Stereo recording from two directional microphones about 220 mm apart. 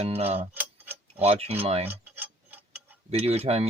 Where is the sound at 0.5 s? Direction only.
10° right (ahead or behind).